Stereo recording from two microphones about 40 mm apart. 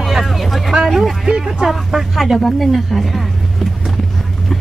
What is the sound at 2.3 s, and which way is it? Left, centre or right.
Speech, centre.